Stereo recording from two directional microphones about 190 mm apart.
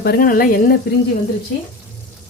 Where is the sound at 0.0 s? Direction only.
50° left (ahead or behind).